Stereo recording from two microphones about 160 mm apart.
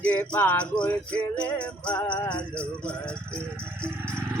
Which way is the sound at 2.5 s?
5° left (ahead or behind).